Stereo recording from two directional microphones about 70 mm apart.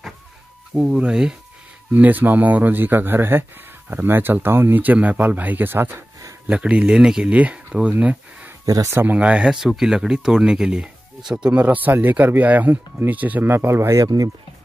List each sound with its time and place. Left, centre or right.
0.7 s speech: centre
1.9 s speech: right
6.4 s speech: centre
11.6 s speech: right
13.5 s speech: right
14.0 s speech: right